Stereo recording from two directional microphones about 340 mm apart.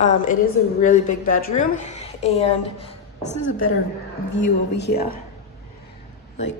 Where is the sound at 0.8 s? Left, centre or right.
Left.